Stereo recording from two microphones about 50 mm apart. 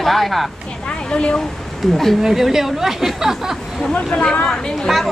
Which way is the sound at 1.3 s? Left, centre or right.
Centre.